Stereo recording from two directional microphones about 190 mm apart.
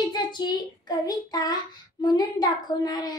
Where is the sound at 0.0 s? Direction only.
25° left (ahead or behind).